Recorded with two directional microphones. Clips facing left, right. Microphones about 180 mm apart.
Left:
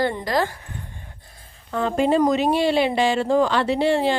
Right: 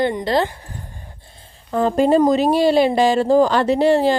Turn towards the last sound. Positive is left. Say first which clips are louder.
# right 5 dB
turn(degrees=-40)  # may be behind; listen again after turning